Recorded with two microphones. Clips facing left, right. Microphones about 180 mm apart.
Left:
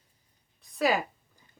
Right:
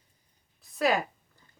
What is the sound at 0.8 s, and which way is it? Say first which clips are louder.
Speech: even; centre (ahead or behind).